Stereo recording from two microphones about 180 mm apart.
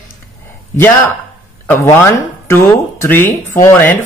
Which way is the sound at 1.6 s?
10° left (ahead or behind).